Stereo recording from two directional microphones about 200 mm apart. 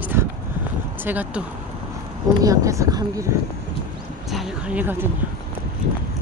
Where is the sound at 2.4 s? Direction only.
15° right (ahead or behind).